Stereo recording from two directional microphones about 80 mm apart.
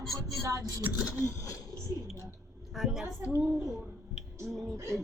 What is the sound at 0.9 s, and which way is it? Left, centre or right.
Speech, left.